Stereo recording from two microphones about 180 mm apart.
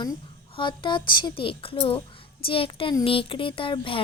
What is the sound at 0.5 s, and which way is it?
A woman's voice, 25° left (ahead or behind).